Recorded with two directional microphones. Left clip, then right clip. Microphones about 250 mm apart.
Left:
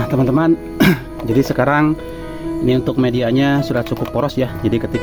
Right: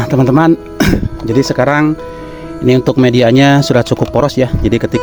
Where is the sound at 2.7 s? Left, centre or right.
Right.